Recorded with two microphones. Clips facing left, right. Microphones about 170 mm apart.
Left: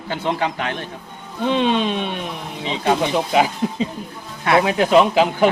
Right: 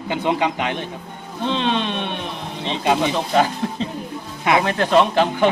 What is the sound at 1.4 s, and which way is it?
Speech, 10° left (ahead or behind).